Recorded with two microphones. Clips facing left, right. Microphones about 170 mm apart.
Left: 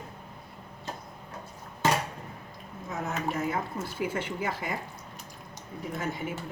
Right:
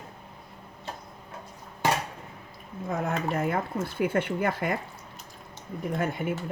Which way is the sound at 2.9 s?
55° right (ahead or behind).